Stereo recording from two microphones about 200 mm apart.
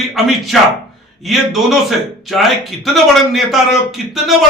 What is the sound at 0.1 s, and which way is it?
A man's voice, centre (ahead or behind).